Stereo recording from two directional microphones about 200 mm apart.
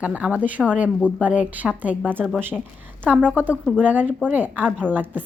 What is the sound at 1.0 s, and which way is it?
Speech, 5° left (ahead or behind).